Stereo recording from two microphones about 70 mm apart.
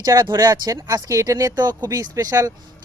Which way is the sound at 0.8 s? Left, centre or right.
Right.